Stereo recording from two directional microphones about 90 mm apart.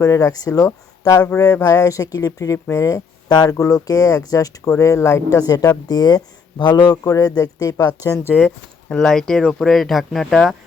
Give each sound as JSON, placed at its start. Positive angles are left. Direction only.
{"t": 0.0, "sound": "speech", "side_deg": 40}
{"t": 7.0, "sound": "speech", "side_deg": 40}
{"t": 8.9, "sound": "speech", "side_deg": 5}